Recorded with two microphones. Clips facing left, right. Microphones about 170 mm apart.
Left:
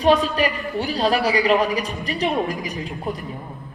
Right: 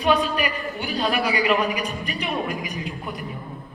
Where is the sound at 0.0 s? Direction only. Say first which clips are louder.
Left 4 dB; 35° left (ahead or behind).